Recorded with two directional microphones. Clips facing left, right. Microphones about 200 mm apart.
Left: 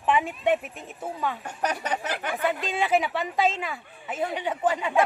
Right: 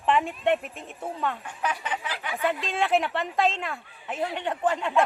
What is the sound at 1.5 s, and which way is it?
Speech, 40° left (ahead or behind).